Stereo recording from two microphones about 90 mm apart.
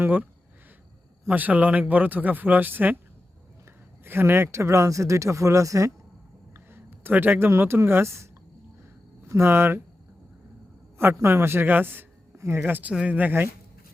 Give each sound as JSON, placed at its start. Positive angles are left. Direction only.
{"t": 0.0, "sound": "a man's voice", "side_deg": -20}
{"t": 1.3, "sound": "a man's voice", "side_deg": -15}
{"t": 4.0, "sound": "speech", "side_deg": -25}
{"t": 6.5, "sound": "a man's voice", "side_deg": -25}
{"t": 10.9, "sound": "a man's voice", "side_deg": -25}